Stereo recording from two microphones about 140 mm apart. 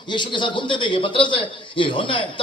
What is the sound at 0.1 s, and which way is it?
A man's voice, 35° left (ahead or behind).